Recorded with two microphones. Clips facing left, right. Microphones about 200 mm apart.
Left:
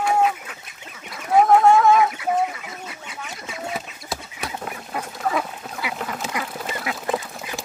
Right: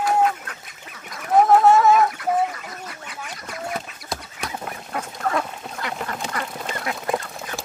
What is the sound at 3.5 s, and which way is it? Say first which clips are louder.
Fowl: right 1 dB; 5° left (ahead or behind).